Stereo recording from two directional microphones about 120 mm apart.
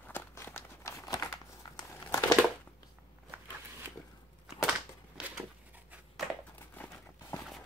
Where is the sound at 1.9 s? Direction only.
30° left (ahead or behind).